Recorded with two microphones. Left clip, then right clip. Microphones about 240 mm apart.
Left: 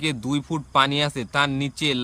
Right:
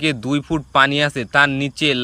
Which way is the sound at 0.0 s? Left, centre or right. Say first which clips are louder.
Right 6 dB; centre.